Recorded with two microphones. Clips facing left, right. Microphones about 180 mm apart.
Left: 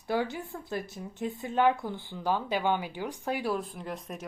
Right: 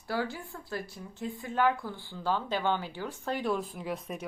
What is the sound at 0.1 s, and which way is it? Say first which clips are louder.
Speech: left 3 dB; 20° left (ahead or behind).